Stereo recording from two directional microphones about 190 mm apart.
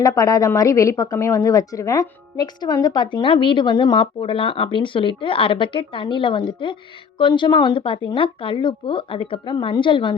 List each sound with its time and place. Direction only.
0.0 s a woman's voice: 15° left (ahead or behind)